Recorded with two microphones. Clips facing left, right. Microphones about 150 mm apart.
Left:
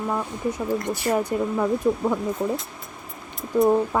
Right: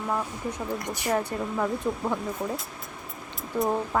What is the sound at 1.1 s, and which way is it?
A woman's voice, 10° left (ahead or behind).